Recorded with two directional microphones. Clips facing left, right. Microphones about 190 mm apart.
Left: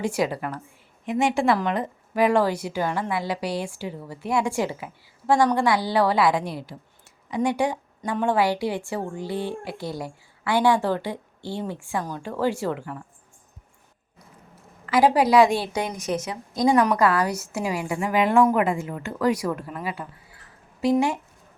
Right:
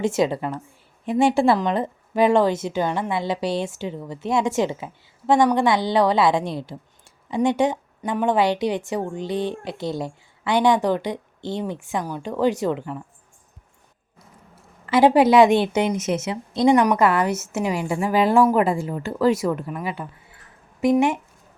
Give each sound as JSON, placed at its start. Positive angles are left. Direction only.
{"t": 0.0, "sound": "a woman's voice", "side_deg": -25}
{"t": 14.8, "sound": "a woman's voice", "side_deg": -25}